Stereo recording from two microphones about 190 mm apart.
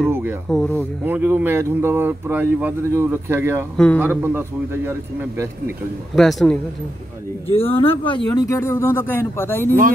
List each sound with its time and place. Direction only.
0.1 s a sound: 10° right (ahead or behind)
0.5 s a man's voice: 5° left (ahead or behind)
0.7 s speech: 10° right (ahead or behind)
3.7 s a man's voice: 5° left (ahead or behind)
4.0 s speech: 10° right (ahead or behind)
6.1 s a man's voice: centre (ahead or behind)
7.5 s speech: 30° left (ahead or behind); by 9.7 s 10° left (ahead or behind)